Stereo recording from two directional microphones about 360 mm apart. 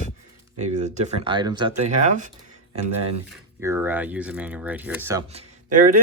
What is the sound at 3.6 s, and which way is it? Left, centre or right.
Speech, centre.